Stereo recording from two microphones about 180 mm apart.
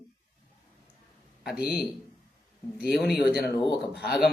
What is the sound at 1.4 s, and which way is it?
Speech, centre (ahead or behind).